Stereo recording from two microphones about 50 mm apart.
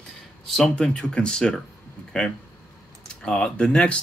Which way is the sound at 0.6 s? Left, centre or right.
Left.